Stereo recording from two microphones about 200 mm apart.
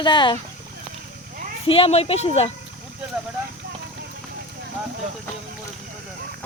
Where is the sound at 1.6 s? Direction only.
30° left (ahead or behind).